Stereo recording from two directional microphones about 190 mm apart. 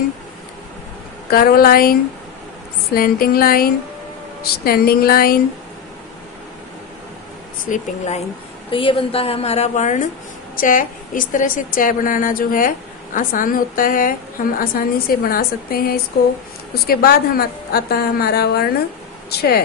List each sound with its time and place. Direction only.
1.3 s a woman's voice: 50° left (ahead or behind)
7.7 s a woman's voice: 40° left (ahead or behind); by 19.6 s 55° left (ahead or behind)